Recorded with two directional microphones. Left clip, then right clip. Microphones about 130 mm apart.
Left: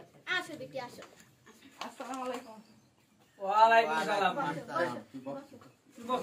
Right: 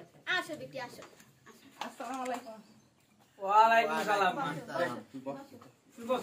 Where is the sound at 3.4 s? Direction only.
20° right (ahead or behind).